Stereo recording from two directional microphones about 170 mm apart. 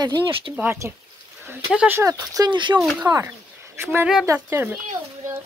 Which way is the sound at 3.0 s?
15° right (ahead or behind).